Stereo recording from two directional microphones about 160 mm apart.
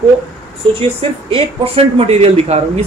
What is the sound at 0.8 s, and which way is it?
Speech, 35° right (ahead or behind).